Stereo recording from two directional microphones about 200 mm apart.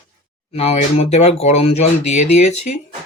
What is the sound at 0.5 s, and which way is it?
Speech, 30° left (ahead or behind).